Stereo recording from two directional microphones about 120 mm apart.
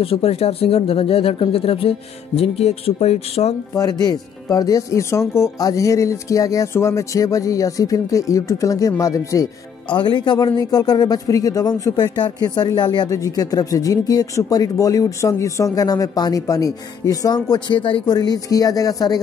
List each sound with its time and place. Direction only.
0.0 s speech: 55° left (ahead or behind)
3.7 s speech: 30° left (ahead or behind)
9.8 s speech: 40° left (ahead or behind)